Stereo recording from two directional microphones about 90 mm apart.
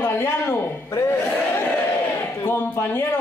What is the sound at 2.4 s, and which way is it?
Speech, 20° left (ahead or behind).